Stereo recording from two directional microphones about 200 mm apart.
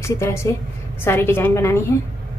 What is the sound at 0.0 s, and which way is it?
A woman's voice, 15° left (ahead or behind).